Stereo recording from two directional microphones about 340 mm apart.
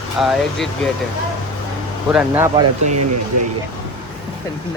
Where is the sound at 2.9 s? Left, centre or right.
Right.